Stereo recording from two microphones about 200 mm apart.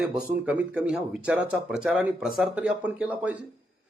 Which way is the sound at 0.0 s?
5° right (ahead or behind).